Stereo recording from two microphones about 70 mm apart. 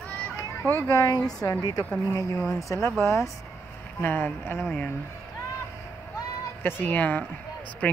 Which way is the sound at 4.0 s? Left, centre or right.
Left.